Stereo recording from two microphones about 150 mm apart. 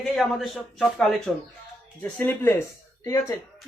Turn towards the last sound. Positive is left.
turn(degrees=20)  # may be behind; listen again after turning